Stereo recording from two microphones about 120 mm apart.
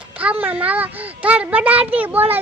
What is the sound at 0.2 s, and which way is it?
A child's voice, 10° right (ahead or behind).